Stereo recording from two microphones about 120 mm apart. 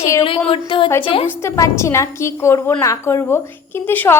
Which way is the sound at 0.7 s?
45° left (ahead or behind).